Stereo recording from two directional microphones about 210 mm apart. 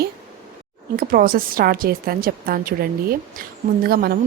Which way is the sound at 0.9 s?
45° right (ahead or behind).